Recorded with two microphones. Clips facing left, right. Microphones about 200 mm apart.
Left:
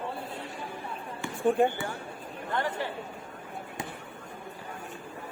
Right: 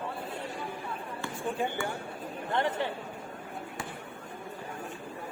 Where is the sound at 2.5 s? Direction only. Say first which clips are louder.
Right 1 dB; 20° right (ahead or behind).